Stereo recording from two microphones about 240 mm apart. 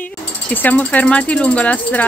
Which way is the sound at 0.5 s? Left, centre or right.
Centre.